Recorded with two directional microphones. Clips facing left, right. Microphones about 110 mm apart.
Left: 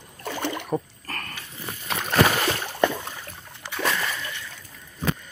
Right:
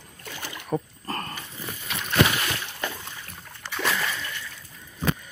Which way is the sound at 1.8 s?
45° left (ahead or behind).